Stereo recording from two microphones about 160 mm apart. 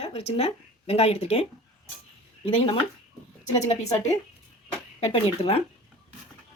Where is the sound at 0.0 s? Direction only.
40° left (ahead or behind).